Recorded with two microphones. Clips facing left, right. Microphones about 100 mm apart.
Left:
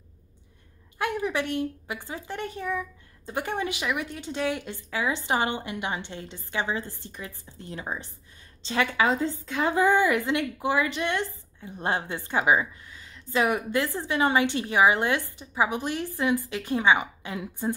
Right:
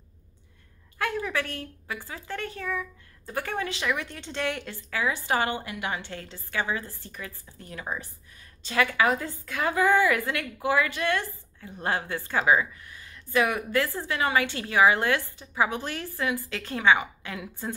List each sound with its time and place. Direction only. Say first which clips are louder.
0.9 s a woman's voice: left 2 dB; 20° left (ahead or behind)